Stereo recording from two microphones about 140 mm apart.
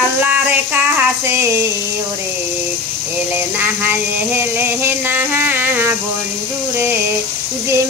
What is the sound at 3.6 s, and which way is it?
Music, 15° right (ahead or behind).